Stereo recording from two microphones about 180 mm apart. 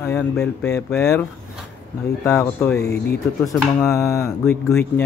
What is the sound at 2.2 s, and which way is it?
Speech, 15° left (ahead or behind).